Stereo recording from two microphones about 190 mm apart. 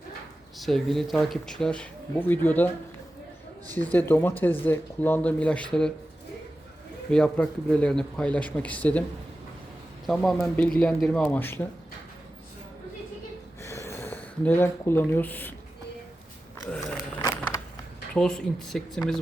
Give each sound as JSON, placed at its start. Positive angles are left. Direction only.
{"t": 0.6, "sound": "speech", "side_deg": 0}
{"t": 3.9, "sound": "speech", "side_deg": 10}
{"t": 7.1, "sound": "speech", "side_deg": 5}
{"t": 10.1, "sound": "speech", "side_deg": 0}
{"t": 13.6, "sound": "a sound", "side_deg": 15}
{"t": 17.2, "sound": "a sound", "side_deg": 15}
{"t": 18.1, "sound": "speech", "side_deg": 5}